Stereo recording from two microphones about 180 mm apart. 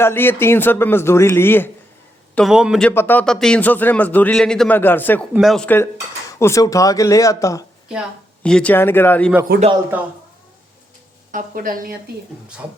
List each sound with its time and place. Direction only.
0.0 s speech: 10° left (ahead or behind)
2.3 s a man's voice: centre (ahead or behind)
2.9 s speech: 10° left (ahead or behind)
5.3 s a man's voice: centre (ahead or behind); by 7.6 s 20° left (ahead or behind)
8.4 s speech: 5° left (ahead or behind)
9.9 s speech: 10° right (ahead or behind)
11.3 s speech: 50° right (ahead or behind)